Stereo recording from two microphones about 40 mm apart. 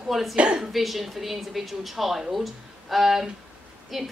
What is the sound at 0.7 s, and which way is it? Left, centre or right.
A woman's voice, centre.